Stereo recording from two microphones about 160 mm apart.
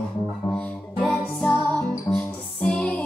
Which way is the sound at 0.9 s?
Centre (ahead or behind).